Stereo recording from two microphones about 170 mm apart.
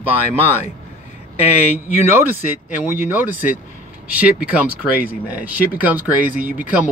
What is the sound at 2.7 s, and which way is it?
Speech, 10° right (ahead or behind).